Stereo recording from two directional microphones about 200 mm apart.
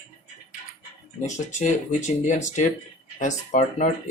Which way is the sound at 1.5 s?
35° left (ahead or behind).